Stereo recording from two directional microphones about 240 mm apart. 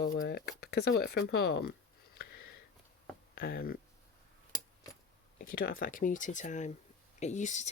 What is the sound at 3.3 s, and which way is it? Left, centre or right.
Speech, left.